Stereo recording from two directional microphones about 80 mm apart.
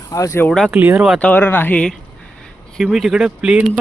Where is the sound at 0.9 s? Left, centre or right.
Centre.